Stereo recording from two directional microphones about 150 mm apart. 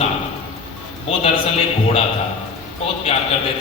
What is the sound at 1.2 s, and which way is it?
Speech, 40° left (ahead or behind).